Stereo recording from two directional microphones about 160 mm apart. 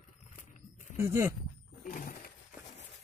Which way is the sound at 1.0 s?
15° right (ahead or behind).